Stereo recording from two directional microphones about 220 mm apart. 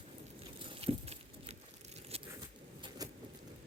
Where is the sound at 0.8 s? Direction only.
25° right (ahead or behind).